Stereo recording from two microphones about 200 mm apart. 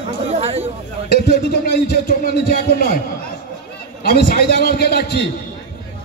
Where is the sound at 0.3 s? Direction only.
30° right (ahead or behind).